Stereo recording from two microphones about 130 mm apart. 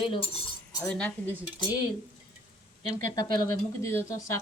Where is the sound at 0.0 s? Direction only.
40° left (ahead or behind).